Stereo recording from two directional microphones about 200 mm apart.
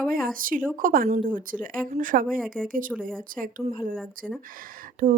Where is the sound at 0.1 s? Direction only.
45° right (ahead or behind).